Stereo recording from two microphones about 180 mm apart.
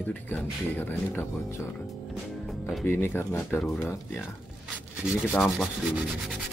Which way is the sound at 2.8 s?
15° left (ahead or behind).